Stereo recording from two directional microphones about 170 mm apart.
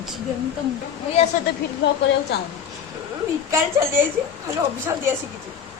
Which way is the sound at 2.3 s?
80° left.